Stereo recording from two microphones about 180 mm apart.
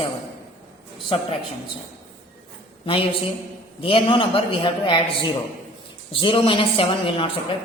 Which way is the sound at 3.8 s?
30° left (ahead or behind).